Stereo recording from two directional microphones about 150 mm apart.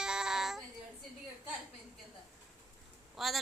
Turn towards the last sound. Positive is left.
turn(degrees=0)  # may be behind; listen again after turning